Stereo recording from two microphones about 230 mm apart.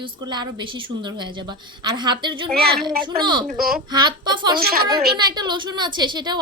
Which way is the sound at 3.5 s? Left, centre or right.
Right.